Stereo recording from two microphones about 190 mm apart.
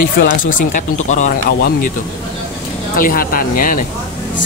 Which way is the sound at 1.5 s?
55° left (ahead or behind).